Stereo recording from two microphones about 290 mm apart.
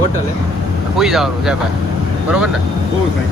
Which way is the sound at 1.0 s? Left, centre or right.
Centre.